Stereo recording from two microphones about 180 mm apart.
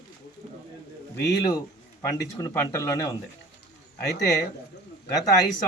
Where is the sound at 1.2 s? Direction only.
20° left (ahead or behind).